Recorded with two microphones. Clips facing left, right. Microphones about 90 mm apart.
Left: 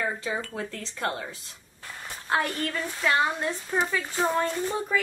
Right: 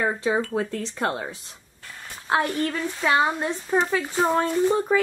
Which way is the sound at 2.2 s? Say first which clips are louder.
Right 4 dB; 10° right (ahead or behind).